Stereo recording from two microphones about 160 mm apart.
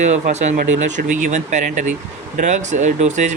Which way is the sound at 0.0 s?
45° right (ahead or behind).